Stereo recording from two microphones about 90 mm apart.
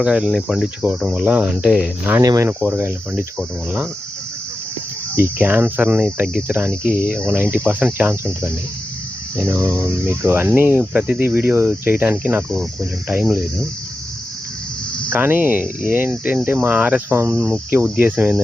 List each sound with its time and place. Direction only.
0.0 s cricket: 10° right (ahead or behind)
0.8 s cricket: 15° right (ahead or behind)
2.2 s speech: 40° right (ahead or behind)
2.6 s speech: 20° right (ahead or behind)
5.1 s speech: 20° right (ahead or behind)
12.5 s cricket: centre (ahead or behind)
15.1 s speech: 20° right (ahead or behind)